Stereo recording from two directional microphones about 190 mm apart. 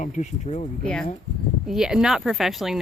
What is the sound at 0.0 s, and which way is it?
Speech, 35° left (ahead or behind).